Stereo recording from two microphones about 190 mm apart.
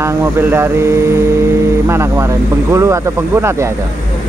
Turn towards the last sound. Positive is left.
turn(degrees=-15)  # may be behind; listen again after turning